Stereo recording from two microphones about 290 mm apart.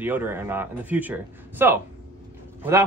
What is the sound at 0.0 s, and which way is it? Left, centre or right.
A man's voice, centre.